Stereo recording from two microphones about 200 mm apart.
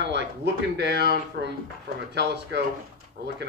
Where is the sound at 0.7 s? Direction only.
60° right (ahead or behind).